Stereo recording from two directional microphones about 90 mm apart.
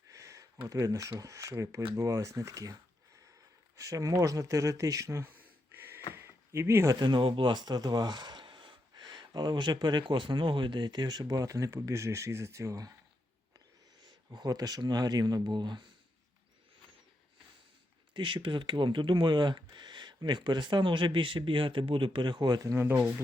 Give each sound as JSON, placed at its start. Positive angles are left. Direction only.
{"t": 0.1, "sound": "a sound", "side_deg": -35}
{"t": 0.7, "sound": "speech", "side_deg": -40}
{"t": 3.8, "sound": "speech", "side_deg": -40}
{"t": 5.3, "sound": "a sound", "side_deg": -20}
{"t": 7.0, "sound": "speech", "side_deg": -65}
{"t": 14.3, "sound": "speech", "side_deg": -45}
{"t": 18.1, "sound": "speech", "side_deg": -65}
{"t": 22.6, "sound": "speech", "side_deg": -30}